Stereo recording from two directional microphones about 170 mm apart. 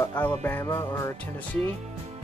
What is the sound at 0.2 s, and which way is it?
Speech, 10° left (ahead or behind).